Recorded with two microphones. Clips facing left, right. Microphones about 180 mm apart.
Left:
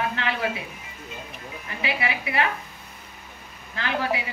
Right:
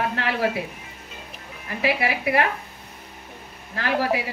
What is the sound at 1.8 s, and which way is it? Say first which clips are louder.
Speech: right 5 dB; 60° right (ahead or behind).